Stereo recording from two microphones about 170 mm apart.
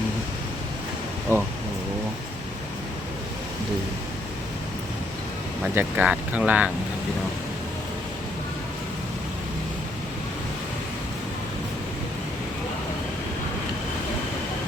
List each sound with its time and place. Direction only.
1.3 s speech: 15° right (ahead or behind)
5.6 s speech: 10° right (ahead or behind)